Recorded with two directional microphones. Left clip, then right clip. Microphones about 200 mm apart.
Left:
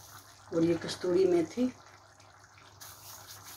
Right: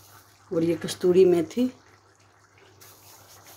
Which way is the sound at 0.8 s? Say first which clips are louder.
Right 9 dB; 55° right (ahead or behind).